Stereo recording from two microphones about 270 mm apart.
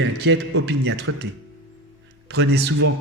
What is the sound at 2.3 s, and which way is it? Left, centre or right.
Speech, right.